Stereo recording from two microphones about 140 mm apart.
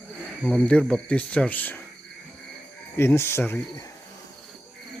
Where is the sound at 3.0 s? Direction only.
15° left (ahead or behind).